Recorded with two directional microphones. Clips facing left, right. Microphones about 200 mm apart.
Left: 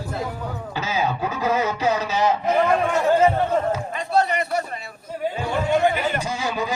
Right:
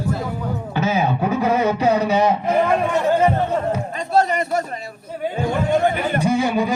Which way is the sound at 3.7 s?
45° right (ahead or behind).